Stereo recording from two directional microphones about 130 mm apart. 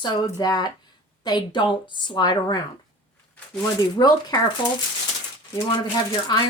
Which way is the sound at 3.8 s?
30° left (ahead or behind).